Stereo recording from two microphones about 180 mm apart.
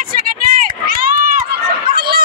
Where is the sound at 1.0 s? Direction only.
50° right (ahead or behind).